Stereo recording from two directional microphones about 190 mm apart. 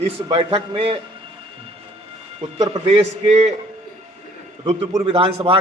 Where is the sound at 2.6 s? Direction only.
30° right (ahead or behind).